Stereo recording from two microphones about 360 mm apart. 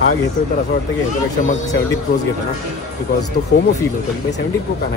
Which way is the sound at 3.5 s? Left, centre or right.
Left.